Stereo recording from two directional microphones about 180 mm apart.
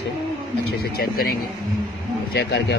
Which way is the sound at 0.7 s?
55° left (ahead or behind).